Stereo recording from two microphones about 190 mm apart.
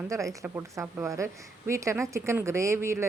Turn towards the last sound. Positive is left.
turn(degrees=-15)  # may be behind; listen again after turning